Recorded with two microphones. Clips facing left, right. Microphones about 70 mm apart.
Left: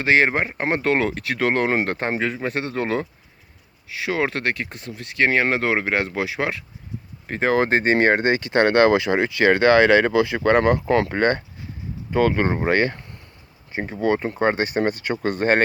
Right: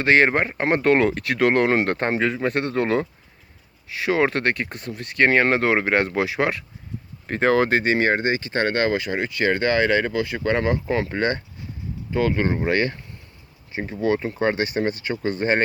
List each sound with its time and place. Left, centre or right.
0.0 s speech: centre
7.5 s speech: left
7.9 s speech: left